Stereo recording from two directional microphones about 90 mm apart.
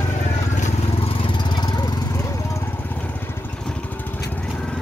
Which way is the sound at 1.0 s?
80° left.